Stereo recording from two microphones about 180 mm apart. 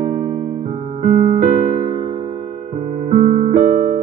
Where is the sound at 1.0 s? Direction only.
45° right (ahead or behind).